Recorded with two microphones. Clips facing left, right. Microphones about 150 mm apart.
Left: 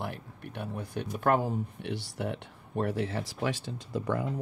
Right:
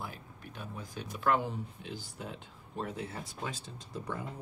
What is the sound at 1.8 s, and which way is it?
Speech, 70° left (ahead or behind).